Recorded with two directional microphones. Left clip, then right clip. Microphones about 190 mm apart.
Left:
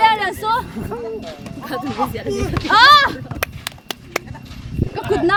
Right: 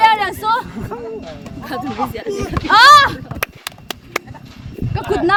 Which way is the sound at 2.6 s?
40° right (ahead or behind).